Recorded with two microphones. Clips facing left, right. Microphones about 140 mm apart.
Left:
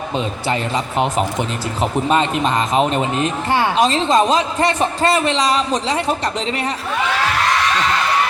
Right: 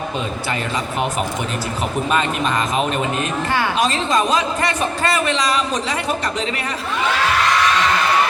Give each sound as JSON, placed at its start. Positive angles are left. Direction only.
{"t": 1.8, "sound": "speech", "side_deg": 25}